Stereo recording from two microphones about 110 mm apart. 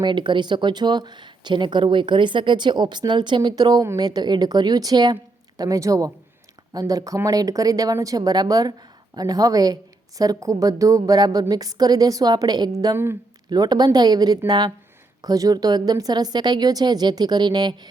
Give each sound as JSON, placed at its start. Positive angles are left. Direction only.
{"t": 0.0, "sound": "speech", "side_deg": -45}